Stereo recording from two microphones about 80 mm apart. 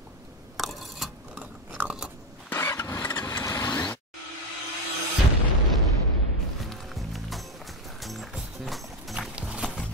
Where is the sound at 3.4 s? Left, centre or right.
Left.